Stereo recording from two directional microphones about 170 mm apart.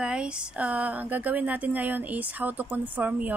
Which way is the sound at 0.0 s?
5° right (ahead or behind).